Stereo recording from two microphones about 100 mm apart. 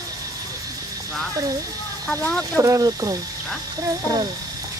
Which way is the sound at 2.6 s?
35° right (ahead or behind).